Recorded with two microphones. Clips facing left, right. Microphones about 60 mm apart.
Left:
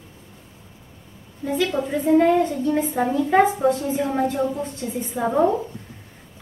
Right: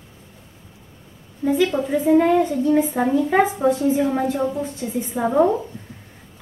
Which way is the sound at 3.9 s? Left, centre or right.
Centre.